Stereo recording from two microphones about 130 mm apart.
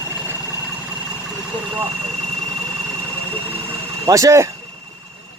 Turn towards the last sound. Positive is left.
turn(degrees=-25)  # may be behind; listen again after turning